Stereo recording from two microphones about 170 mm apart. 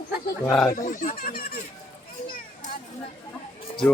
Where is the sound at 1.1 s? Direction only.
60° left (ahead or behind).